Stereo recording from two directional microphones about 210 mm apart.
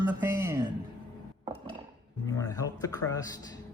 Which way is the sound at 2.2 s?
15° left (ahead or behind).